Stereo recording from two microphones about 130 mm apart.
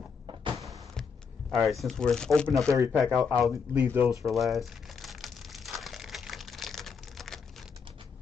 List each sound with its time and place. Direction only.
0.3 s a sound: 35° right (ahead or behind)
0.6 s a sound: 25° right (ahead or behind)
1.5 s speech: centre (ahead or behind)
2.7 s speech: 25° right (ahead or behind)
3.0 s speech: centre (ahead or behind)
3.7 s speech: 15° right (ahead or behind)
4.1 s crumpling: centre (ahead or behind)